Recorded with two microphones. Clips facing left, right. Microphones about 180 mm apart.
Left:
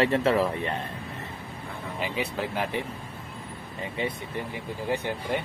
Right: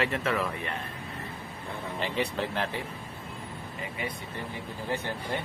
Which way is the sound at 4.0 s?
25° left (ahead or behind).